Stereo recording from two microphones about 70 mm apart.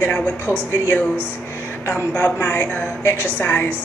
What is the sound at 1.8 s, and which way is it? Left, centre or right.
Speech, left.